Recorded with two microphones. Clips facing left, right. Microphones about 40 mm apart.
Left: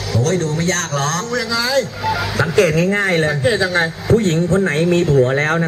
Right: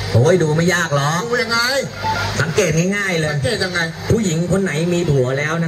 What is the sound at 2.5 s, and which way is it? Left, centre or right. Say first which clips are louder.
A man's voice: left 3 dB; centre.